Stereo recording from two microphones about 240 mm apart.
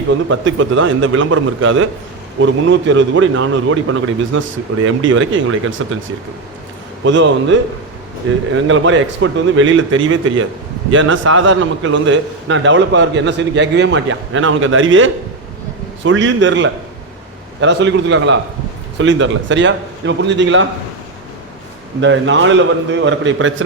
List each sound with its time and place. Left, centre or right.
0.3 s a man's voice: right
7.0 s a man's voice: right
22.0 s a man's voice: right